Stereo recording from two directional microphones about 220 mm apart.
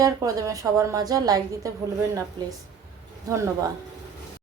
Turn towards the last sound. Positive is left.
turn(degrees=-15)  # may be behind; listen again after turning